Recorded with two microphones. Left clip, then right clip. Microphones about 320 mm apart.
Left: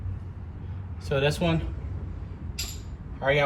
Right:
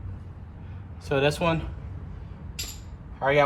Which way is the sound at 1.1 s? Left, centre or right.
Centre.